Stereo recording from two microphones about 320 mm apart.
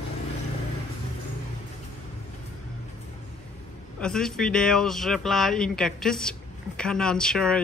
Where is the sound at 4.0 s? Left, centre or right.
Centre.